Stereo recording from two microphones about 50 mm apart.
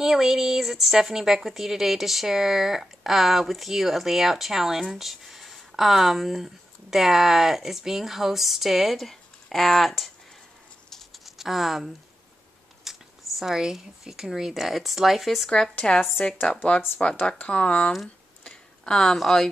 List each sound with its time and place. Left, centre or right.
0.0 s a woman's voice: centre
11.2 s speech: centre
12.9 s a sound: centre
13.4 s a woman's voice: centre
15.5 s speech: centre
18.4 s tick-tock: centre
19.1 s a woman's voice: centre